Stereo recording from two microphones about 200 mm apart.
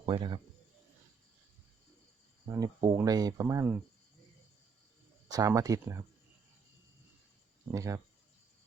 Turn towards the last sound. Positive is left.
turn(degrees=-15)  # may be behind; listen again after turning